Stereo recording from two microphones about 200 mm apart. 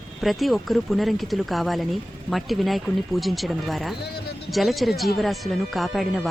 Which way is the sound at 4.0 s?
55° left (ahead or behind).